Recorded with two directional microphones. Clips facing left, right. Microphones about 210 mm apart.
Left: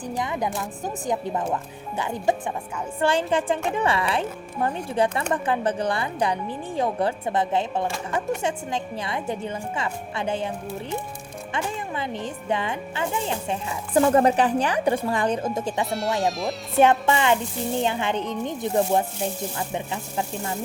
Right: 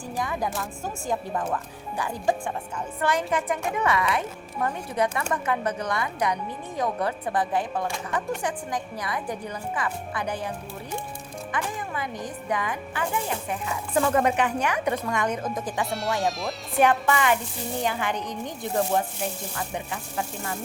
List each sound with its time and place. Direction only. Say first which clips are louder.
0.0 s speech: left 2 dB; 20° left (ahead or behind)
15.9 s speech: left 2 dB; centre (ahead or behind)
16.7 s speech: left 3 dB; 25° left (ahead or behind)